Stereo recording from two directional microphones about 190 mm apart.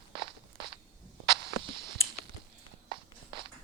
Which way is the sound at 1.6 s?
25° right (ahead or behind).